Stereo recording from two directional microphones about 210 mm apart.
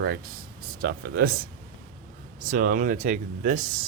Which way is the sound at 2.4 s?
40° right (ahead or behind).